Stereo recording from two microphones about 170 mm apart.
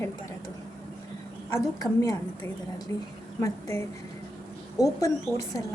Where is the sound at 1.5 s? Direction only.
20° left (ahead or behind).